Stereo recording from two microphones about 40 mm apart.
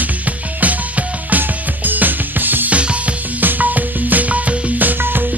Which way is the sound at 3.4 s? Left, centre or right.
Right.